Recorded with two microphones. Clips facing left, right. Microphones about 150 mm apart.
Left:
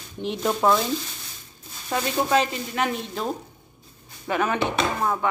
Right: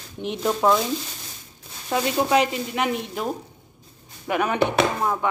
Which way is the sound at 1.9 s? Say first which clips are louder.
Right 2 dB; 15° right (ahead or behind).